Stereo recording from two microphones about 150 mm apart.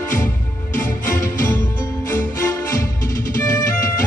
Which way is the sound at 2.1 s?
20° left (ahead or behind).